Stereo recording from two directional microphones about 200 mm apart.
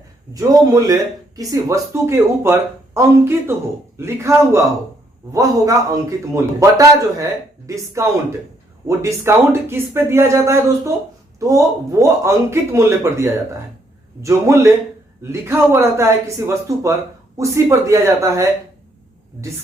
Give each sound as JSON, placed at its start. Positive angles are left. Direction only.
{"t": 0.3, "sound": "speech", "side_deg": -20}
{"t": 8.9, "sound": "speech", "side_deg": -15}